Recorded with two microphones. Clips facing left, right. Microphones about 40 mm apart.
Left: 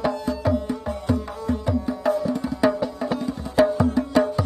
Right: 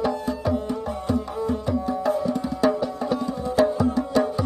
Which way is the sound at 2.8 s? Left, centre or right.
Centre.